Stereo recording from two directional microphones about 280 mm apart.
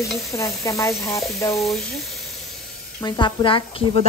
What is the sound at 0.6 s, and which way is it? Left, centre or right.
Speech, centre.